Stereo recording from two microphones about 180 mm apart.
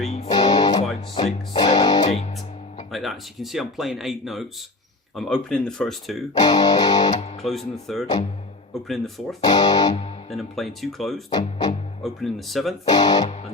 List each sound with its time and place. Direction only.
0.3 s music: 20° left (ahead or behind)
2.9 s speech: centre (ahead or behind)
6.3 s music: 20° left (ahead or behind)
7.4 s speech: centre (ahead or behind)
9.4 s music: 20° left (ahead or behind)
10.2 s speech: centre (ahead or behind)
11.3 s music: 20° left (ahead or behind)
12.0 s speech: centre (ahead or behind)
12.8 s music: 20° left (ahead or behind)